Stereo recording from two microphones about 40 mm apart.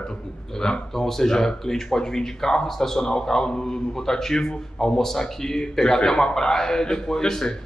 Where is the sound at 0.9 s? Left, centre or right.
Centre.